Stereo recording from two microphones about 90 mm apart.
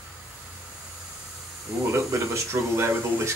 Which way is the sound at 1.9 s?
30° right (ahead or behind).